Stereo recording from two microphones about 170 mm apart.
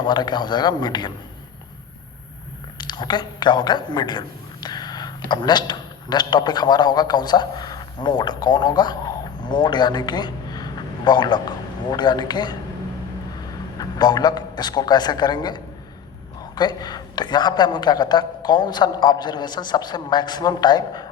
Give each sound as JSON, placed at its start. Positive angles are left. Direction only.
{"t": 0.0, "sound": "a man's voice", "side_deg": 25}
{"t": 2.7, "sound": "a woman's voice", "side_deg": 25}
{"t": 13.7, "sound": "a man's voice", "side_deg": 25}